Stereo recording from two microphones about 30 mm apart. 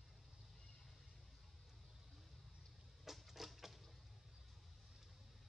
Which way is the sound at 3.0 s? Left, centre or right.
Centre.